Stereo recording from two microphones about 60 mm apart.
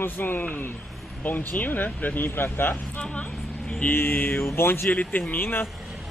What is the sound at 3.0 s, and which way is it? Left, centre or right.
Speech, left.